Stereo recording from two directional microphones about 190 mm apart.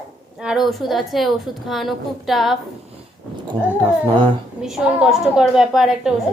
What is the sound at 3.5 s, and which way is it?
Speech, 25° right (ahead or behind).